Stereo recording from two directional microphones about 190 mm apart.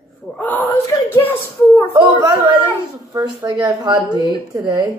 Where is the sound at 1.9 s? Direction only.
15° right (ahead or behind).